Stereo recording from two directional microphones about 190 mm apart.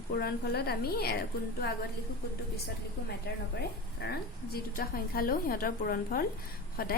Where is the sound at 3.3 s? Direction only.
60° left (ahead or behind).